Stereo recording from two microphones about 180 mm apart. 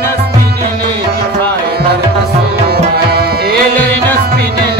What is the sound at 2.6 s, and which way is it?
Tabla, 60° right (ahead or behind).